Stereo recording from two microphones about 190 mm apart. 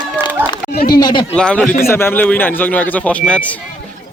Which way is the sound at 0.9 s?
20° left (ahead or behind).